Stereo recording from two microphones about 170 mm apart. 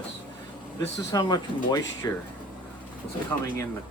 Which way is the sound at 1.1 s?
25° left (ahead or behind).